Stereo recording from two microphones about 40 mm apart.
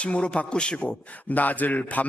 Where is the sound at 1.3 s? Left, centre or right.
Left.